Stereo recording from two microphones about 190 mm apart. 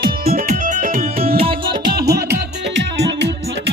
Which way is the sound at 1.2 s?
30° right (ahead or behind).